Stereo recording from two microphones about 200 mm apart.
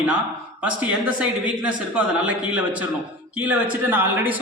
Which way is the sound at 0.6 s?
5° right (ahead or behind).